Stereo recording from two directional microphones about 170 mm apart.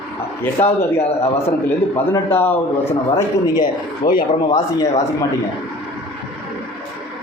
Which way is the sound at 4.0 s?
55° left (ahead or behind).